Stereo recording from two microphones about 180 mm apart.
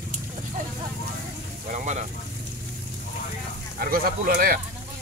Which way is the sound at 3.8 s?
55° right (ahead or behind).